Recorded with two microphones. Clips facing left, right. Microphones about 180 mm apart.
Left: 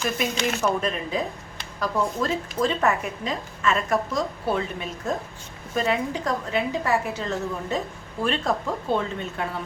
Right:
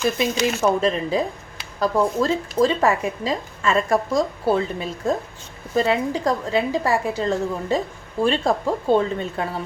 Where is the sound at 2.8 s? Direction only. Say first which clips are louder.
Right 4 dB; 30° right (ahead or behind).